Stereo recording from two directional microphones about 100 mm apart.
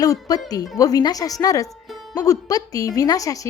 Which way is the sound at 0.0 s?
40° left (ahead or behind).